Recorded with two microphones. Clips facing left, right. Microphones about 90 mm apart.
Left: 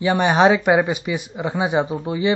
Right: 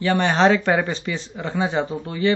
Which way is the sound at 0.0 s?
15° left (ahead or behind).